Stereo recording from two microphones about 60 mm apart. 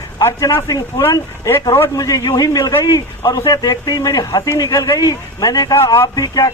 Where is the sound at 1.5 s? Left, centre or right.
Left.